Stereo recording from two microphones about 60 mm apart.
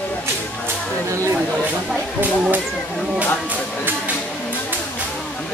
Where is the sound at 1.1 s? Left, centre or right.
Right.